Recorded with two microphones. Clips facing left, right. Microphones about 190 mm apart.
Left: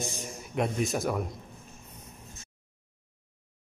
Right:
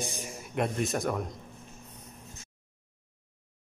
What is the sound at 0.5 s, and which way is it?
Speech, centre (ahead or behind).